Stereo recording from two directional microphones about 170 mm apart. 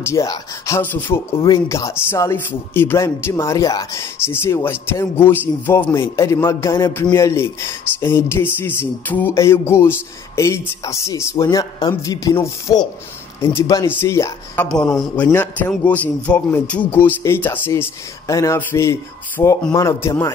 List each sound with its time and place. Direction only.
0.0 s speech: 20° left (ahead or behind)